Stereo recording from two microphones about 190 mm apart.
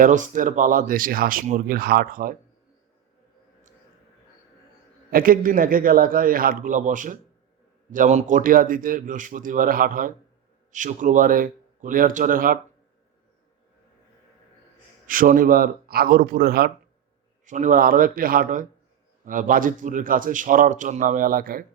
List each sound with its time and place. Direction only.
0.0 s speech: 45° right (ahead or behind)
5.1 s speech: 50° right (ahead or behind)
15.0 s speech: 45° right (ahead or behind)
17.4 s speech: 40° right (ahead or behind)